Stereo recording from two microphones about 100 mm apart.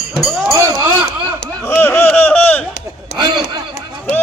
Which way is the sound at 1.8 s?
20° left (ahead or behind).